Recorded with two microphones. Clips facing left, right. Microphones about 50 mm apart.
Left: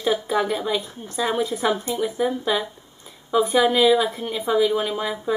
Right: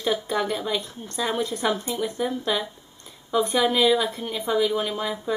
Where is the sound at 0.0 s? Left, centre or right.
Centre.